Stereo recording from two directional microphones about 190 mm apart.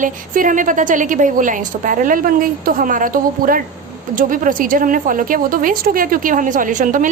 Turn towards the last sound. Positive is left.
turn(degrees=-45)  # may be behind; listen again after turning